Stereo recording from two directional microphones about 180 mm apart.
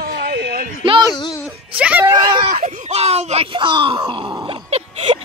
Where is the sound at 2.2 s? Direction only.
20° right (ahead or behind).